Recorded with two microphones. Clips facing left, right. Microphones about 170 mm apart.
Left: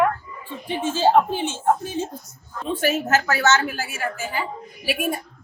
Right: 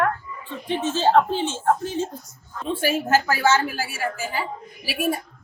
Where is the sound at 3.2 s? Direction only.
10° right (ahead or behind).